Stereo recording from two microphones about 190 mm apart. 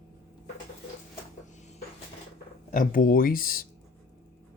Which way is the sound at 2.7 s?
45° left (ahead or behind).